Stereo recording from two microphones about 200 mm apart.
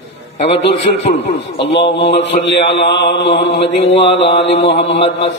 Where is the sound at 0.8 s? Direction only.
35° left (ahead or behind).